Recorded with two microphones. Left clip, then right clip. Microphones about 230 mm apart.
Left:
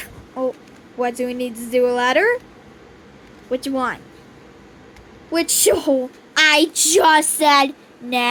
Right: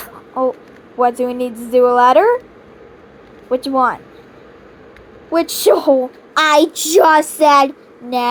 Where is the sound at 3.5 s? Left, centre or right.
Centre.